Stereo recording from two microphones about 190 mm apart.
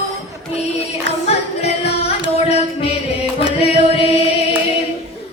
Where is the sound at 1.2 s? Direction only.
35° left (ahead or behind).